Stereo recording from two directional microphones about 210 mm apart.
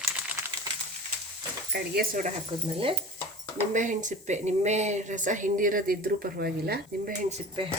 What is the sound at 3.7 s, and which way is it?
Speech, 35° right (ahead or behind).